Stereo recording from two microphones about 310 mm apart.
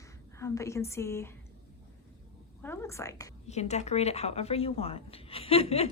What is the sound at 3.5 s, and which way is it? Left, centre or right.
Speech, left.